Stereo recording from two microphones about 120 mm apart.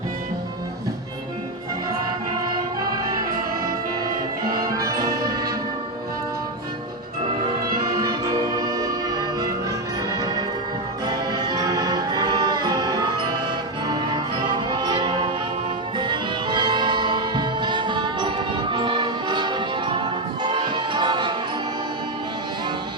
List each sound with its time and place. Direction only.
4.6 s music: 30° right (ahead or behind)
7.9 s music: 35° right (ahead or behind)